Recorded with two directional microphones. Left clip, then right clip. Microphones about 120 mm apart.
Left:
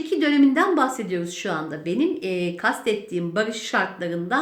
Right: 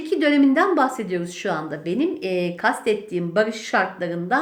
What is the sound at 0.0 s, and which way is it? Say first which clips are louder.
A woman's voice: right 1 dB; 20° right (ahead or behind).